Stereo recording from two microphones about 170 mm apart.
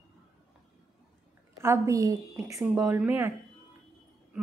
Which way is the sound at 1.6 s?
15° right (ahead or behind).